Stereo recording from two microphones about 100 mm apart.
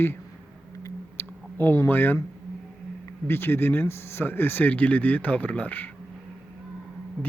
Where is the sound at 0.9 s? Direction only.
20° left (ahead or behind).